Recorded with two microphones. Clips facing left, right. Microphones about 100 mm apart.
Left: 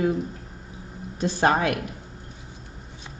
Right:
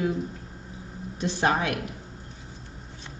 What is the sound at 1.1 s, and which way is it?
Speech, 45° left (ahead or behind).